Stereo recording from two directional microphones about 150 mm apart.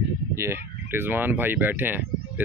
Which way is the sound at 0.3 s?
15° right (ahead or behind).